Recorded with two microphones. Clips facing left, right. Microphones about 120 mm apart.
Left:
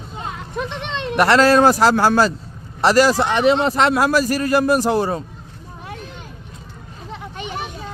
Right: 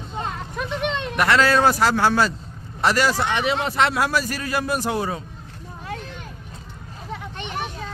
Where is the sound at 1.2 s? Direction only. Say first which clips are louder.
Left 5 dB; 40° left (ahead or behind).